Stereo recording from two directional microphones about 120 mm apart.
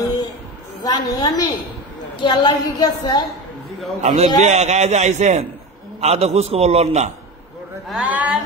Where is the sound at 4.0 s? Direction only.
70° right (ahead or behind).